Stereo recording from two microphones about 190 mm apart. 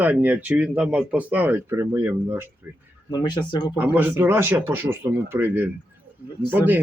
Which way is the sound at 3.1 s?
20° left (ahead or behind).